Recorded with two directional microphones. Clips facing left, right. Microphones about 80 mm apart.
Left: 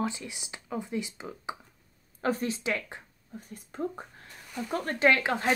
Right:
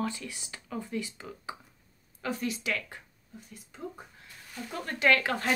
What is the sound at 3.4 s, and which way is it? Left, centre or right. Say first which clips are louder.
Speech: left 8 dB; left.